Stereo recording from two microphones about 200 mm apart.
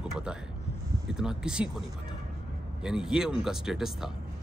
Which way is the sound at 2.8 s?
5° right (ahead or behind).